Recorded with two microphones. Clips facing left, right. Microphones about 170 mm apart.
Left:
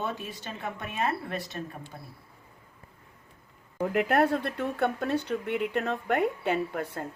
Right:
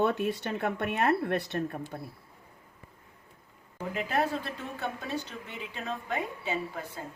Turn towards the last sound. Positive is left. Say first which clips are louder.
# left 5 dB
turn(degrees=65)  # may be behind; listen again after turning